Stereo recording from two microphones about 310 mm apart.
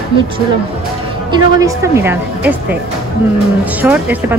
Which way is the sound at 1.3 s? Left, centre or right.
Centre.